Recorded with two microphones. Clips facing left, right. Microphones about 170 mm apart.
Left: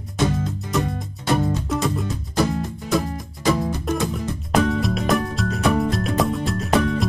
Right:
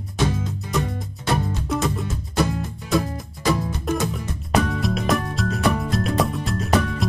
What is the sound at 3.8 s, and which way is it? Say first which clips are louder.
Music: left 1 dB; centre (ahead or behind).